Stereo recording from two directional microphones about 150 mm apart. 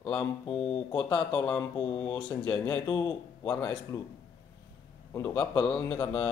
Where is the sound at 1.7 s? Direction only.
30° left (ahead or behind).